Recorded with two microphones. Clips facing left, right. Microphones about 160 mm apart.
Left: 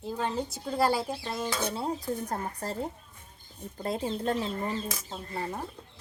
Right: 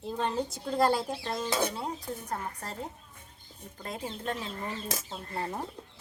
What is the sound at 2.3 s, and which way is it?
Speech, 35° left (ahead or behind).